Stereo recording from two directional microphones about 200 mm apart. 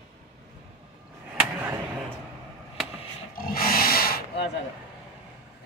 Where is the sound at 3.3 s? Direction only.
45° left (ahead or behind).